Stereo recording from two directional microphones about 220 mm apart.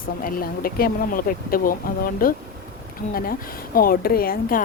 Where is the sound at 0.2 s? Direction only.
40° left (ahead or behind).